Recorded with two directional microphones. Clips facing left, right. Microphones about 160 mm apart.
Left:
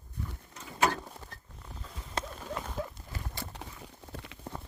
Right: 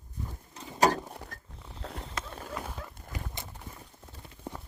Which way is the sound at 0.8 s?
40° right (ahead or behind).